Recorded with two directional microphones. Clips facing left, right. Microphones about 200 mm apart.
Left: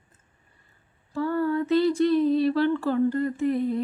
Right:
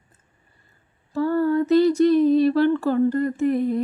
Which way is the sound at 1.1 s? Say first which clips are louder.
Right 5 dB; 40° right (ahead or behind).